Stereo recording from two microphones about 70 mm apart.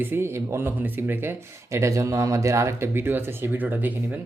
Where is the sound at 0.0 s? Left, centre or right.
Right.